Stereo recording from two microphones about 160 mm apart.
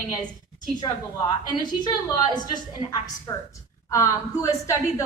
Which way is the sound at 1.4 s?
25° left (ahead or behind).